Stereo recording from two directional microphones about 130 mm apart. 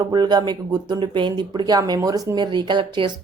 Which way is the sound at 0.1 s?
35° right (ahead or behind).